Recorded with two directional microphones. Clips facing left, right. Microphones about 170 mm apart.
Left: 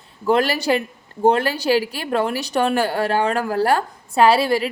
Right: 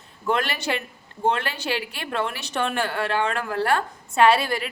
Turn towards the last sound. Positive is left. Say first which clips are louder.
# left 4 dB
turn(degrees=30)  # may be behind; listen again after turning